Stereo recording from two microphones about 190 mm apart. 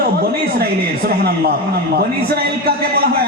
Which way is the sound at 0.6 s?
55° right (ahead or behind).